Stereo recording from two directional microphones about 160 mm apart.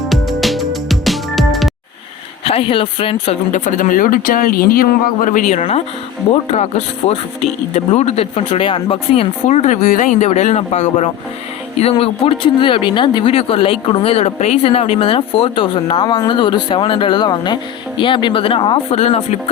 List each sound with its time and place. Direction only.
0.0 s music: centre (ahead or behind)
2.4 s speech: 35° left (ahead or behind)
3.5 s speech: 50° left (ahead or behind)